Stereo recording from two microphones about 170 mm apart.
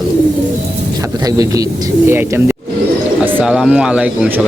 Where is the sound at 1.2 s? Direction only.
20° right (ahead or behind).